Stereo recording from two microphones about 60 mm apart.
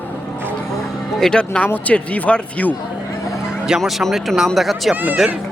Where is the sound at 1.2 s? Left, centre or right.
Centre.